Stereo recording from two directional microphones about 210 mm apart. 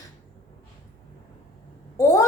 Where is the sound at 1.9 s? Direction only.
15° left (ahead or behind).